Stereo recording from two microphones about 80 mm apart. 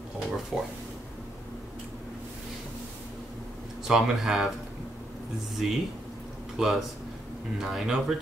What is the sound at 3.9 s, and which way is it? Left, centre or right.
Speech, centre.